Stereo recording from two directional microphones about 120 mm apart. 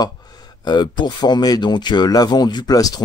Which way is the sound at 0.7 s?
35° left (ahead or behind).